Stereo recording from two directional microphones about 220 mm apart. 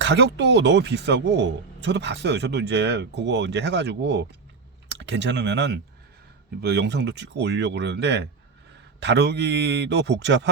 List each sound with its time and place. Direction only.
0.0 s speech: 50° right (ahead or behind)